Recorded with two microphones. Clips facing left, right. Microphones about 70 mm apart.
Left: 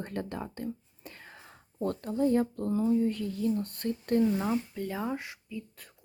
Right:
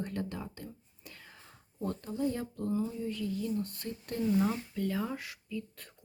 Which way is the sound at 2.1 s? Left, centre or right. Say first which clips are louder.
Left 9 dB; left.